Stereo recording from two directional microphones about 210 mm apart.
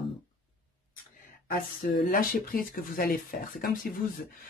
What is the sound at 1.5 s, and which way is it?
Speech, 45° left (ahead or behind).